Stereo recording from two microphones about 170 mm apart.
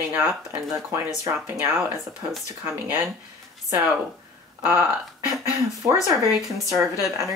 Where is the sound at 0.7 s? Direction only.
20° right (ahead or behind).